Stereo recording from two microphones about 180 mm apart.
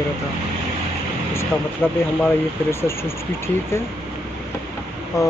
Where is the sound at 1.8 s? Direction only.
10° left (ahead or behind).